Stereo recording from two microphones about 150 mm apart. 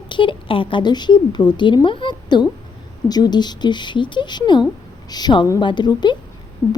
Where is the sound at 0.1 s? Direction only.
35° left (ahead or behind).